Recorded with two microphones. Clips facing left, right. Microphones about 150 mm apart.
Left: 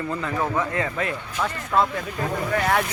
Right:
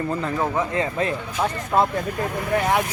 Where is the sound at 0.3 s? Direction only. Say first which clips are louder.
Even; 20° right (ahead or behind).